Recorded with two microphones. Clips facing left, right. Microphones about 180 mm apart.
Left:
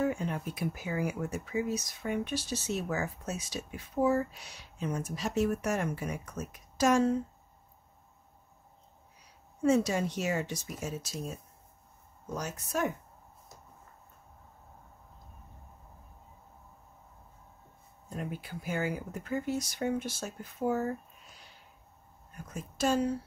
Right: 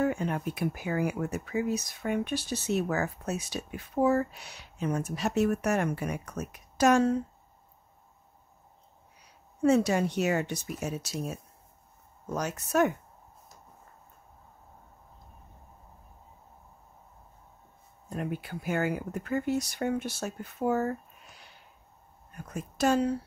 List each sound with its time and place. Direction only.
0.0 s speech: 65° right (ahead or behind)
9.6 s speech: 65° right (ahead or behind)
12.4 s speech: 70° right (ahead or behind)
18.1 s speech: 60° right (ahead or behind)
22.5 s speech: 65° right (ahead or behind)